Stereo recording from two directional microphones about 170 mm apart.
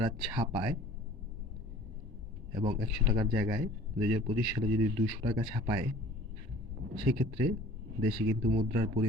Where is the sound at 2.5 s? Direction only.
25° right (ahead or behind).